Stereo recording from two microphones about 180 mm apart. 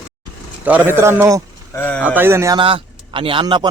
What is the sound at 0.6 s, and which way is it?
Speech, 10° right (ahead or behind).